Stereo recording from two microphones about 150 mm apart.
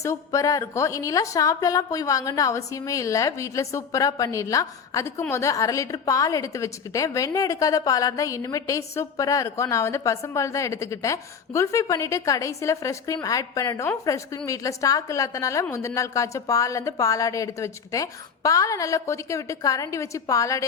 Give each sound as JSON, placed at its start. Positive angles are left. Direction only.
{"t": 0.0, "sound": "a woman's voice", "side_deg": 20}